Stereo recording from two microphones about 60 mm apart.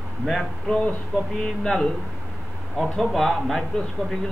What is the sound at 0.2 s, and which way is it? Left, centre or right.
Speech, centre.